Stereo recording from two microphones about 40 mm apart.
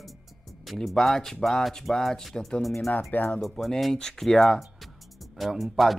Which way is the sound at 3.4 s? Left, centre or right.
Centre.